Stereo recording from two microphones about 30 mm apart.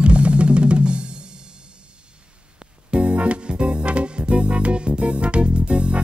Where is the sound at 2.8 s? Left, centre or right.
Right.